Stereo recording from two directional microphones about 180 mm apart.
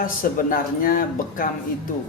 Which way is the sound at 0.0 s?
50° left (ahead or behind).